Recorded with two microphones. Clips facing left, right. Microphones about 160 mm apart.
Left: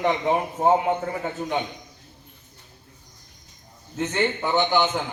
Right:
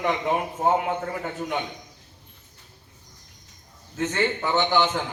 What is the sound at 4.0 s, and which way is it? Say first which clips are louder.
A man's voice: left 1 dB; 15° left (ahead or behind).